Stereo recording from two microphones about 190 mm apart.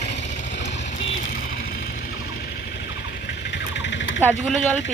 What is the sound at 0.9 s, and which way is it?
Vehicle, 35° left (ahead or behind).